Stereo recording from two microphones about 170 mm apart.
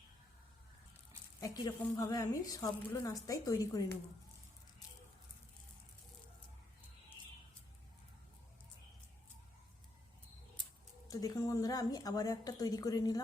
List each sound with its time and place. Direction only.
1.4 s a woman's voice: 20° left (ahead or behind)
11.1 s a woman's voice: 20° left (ahead or behind)